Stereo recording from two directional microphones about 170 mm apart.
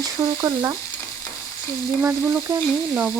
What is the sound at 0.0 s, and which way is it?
Speech, 15° right (ahead or behind).